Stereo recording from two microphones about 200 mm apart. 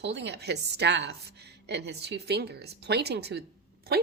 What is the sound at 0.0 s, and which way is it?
A woman's voice, 55° right (ahead or behind).